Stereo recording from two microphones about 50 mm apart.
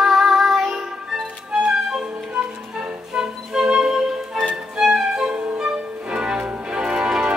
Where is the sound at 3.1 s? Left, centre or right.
Centre.